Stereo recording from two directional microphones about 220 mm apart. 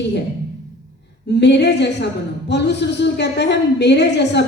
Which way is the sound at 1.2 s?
50° left (ahead or behind).